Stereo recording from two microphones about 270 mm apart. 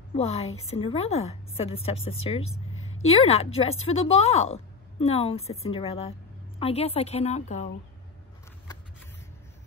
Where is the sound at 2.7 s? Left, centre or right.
Left.